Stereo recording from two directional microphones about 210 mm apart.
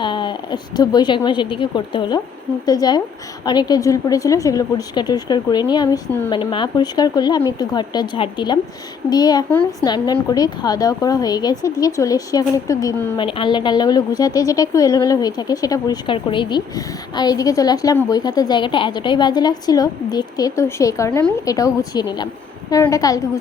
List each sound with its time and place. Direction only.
0.0 s a woman's voice: 20° left (ahead or behind)
13.1 s a woman's voice: 25° left (ahead or behind)